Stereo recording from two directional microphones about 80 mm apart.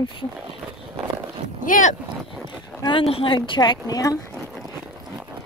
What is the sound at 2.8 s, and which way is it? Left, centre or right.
Speech, left.